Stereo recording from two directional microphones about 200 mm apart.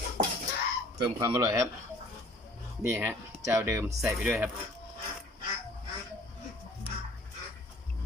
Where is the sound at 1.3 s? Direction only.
10° right (ahead or behind).